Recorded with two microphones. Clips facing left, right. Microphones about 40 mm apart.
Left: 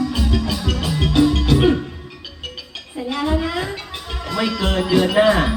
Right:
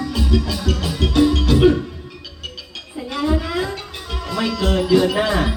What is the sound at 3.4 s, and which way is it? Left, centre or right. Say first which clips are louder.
Music: even; left.